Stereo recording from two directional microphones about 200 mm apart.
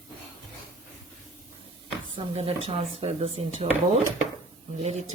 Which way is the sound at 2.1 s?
30° right (ahead or behind).